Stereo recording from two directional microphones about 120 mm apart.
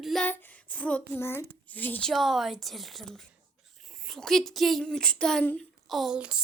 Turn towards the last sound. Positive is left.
turn(degrees=-10)  # may be behind; listen again after turning